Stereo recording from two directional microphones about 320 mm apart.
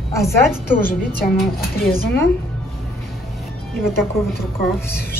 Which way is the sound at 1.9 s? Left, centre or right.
Left.